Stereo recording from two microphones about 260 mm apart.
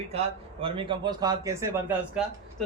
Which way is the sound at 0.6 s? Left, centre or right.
Centre.